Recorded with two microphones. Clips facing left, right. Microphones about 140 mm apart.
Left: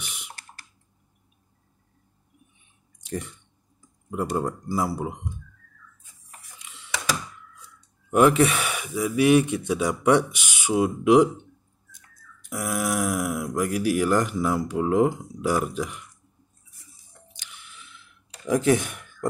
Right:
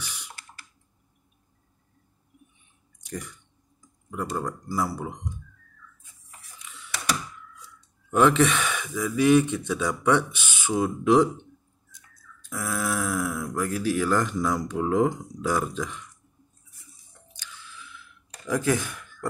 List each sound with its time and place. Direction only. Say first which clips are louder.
0.0 s typing: even; 20° left (ahead or behind)
3.1 s speech: left 4 dB; 25° left (ahead or behind)
8.1 s speech: left 2 dB; 10° left (ahead or behind)
12.4 s speech: left 2 dB; 15° left (ahead or behind)
17.3 s mechanisms: right 3 dB; 20° left (ahead or behind)
18.5 s speech: left 4 dB; 20° left (ahead or behind)